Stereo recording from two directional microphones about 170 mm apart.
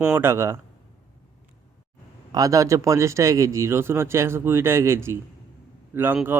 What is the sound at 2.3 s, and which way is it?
A man's voice, 20° right (ahead or behind).